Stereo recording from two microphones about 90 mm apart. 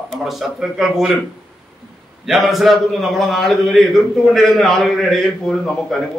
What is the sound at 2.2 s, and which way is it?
A man's voice, centre (ahead or behind).